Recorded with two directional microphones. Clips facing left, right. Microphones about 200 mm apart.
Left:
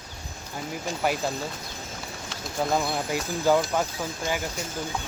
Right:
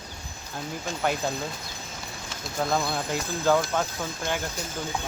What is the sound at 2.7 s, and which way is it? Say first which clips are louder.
Speech: left 1 dB; 10° left (ahead or behind).